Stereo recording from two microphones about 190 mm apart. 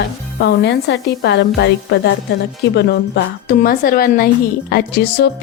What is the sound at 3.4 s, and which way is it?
Speech, 50° left (ahead or behind).